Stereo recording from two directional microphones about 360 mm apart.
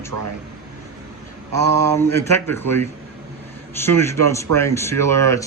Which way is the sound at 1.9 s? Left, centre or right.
Centre.